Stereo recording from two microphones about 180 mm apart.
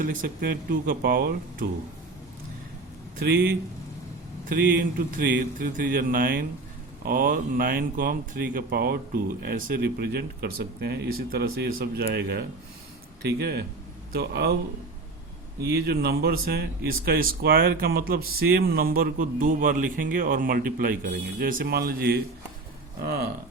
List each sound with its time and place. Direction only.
0.0 s speech: 50° right (ahead or behind)
3.2 s speech: 60° right (ahead or behind)
15.7 s speech: 60° right (ahead or behind)